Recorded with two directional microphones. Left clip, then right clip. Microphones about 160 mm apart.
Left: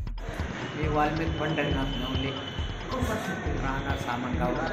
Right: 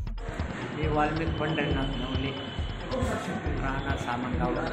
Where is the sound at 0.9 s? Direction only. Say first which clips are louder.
Left 1 dB; centre (ahead or behind).